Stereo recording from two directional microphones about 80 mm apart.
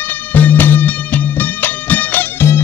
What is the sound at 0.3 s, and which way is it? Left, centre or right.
Music, left.